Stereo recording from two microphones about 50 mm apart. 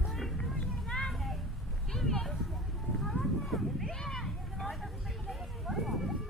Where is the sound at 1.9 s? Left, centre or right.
Centre.